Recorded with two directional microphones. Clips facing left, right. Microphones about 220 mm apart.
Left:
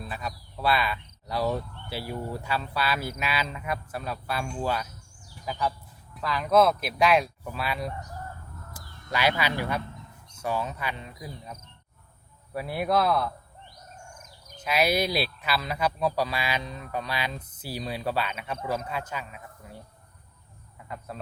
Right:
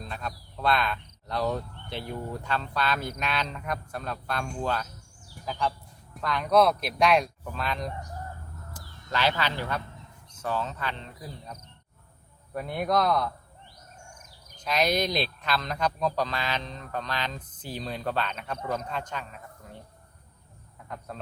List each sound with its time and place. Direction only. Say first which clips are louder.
0.0 s speech: left 1 dB; 5° left (ahead or behind)
14.6 s speech: left 1 dB; 10° left (ahead or behind)
20.8 s speech: left 1 dB; 5° left (ahead or behind)